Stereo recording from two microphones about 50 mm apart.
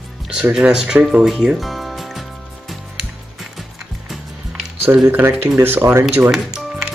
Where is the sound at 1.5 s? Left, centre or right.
Centre.